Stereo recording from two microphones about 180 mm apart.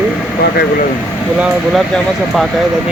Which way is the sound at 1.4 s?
Centre (ahead or behind).